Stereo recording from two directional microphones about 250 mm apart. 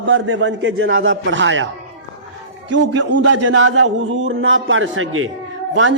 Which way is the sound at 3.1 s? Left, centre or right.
Right.